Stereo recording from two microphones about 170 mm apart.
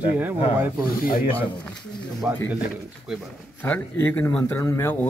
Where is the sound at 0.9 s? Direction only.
55° left (ahead or behind).